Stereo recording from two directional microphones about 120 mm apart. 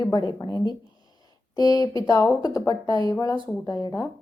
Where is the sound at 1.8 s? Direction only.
30° left (ahead or behind).